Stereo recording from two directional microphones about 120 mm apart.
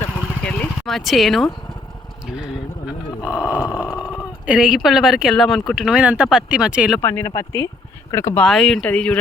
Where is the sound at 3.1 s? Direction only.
30° left (ahead or behind).